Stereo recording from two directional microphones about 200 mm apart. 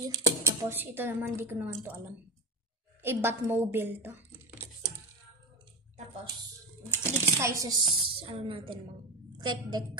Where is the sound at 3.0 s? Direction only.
10° right (ahead or behind).